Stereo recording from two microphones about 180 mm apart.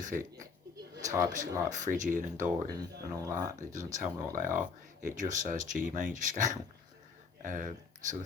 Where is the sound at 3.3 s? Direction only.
45° right (ahead or behind).